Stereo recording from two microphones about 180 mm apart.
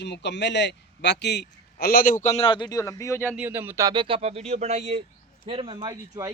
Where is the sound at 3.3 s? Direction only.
10° right (ahead or behind).